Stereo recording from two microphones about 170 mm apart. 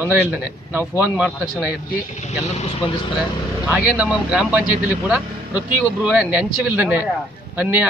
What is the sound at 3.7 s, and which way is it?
A man's voice, 5° right (ahead or behind).